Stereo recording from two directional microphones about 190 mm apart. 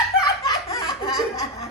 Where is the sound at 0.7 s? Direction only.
20° left (ahead or behind).